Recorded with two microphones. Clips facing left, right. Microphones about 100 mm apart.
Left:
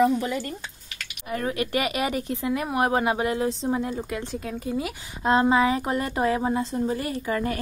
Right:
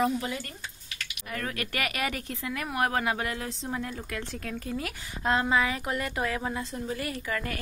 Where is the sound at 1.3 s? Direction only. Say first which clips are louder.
Left 7 dB; 20° left (ahead or behind).